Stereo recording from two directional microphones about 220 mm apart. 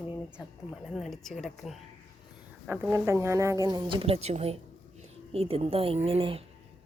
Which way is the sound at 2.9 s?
15° right (ahead or behind).